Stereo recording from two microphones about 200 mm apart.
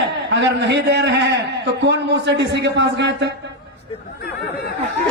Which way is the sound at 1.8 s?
60° right (ahead or behind).